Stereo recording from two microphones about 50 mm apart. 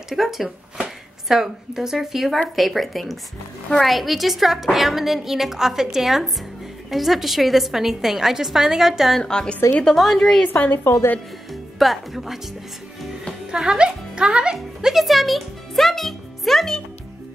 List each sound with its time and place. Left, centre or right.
0.1 s a woman's voice: centre
9.2 s a woman's voice: centre
9.9 s a woman's voice: centre
10.7 s a woman's voice: left
11.8 s a woman's voice: centre
13.7 s music: centre